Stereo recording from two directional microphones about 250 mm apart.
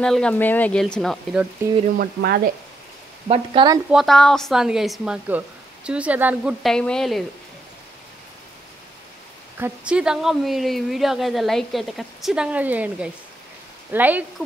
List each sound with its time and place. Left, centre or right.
0.0 s speech: centre
2.0 s speech: right
3.3 s speech: centre
3.9 s speech: centre
9.6 s speech: centre